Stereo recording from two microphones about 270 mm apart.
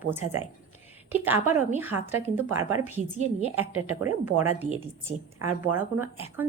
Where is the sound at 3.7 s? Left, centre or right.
Right.